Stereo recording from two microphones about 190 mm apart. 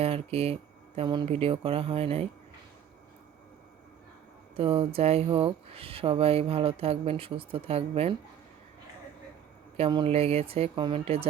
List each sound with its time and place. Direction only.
0.0 s speech: 30° right (ahead or behind)
4.5 s speech: 30° right (ahead or behind)
9.7 s speech: 30° right (ahead or behind)